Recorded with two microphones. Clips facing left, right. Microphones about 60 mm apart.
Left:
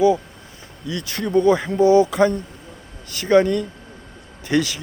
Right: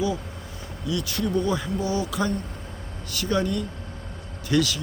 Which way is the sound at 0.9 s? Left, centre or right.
Left.